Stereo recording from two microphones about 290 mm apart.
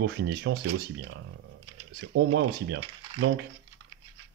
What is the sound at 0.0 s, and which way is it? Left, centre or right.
Speech, right.